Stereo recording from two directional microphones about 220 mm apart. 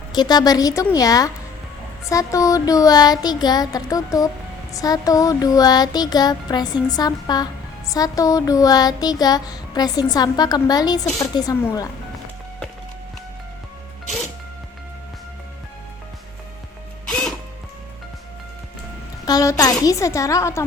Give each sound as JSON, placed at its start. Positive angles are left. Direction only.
{"t": 0.1, "sound": "child singing", "side_deg": 20}
{"t": 17.1, "sound": "music", "side_deg": 5}
{"t": 19.2, "sound": "child singing", "side_deg": 15}